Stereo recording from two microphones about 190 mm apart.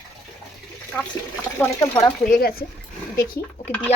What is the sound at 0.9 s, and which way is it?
Speech, 10° left (ahead or behind).